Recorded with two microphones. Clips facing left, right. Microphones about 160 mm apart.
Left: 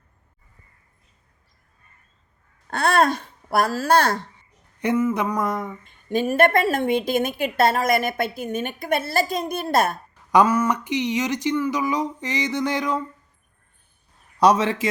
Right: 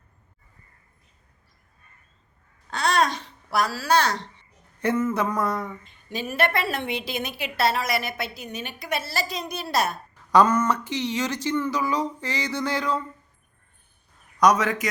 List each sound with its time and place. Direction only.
2.6 s babbling: 55° left (ahead or behind)
4.8 s speech: 15° left (ahead or behind)
5.8 s a woman's voice: 50° left (ahead or behind)
10.3 s speech: 10° left (ahead or behind)
14.3 s a man's voice: 30° left (ahead or behind)